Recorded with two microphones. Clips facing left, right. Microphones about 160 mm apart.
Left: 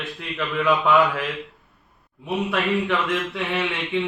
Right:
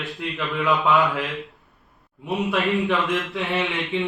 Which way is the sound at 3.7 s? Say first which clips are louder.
Even; centre (ahead or behind).